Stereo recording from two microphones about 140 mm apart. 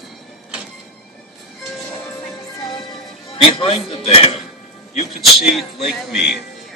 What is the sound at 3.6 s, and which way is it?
Speech, 40° left (ahead or behind).